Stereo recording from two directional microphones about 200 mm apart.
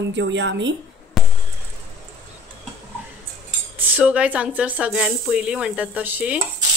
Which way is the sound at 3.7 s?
10° right (ahead or behind).